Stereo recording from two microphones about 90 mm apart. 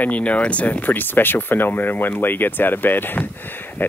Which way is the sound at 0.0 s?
15° left (ahead or behind).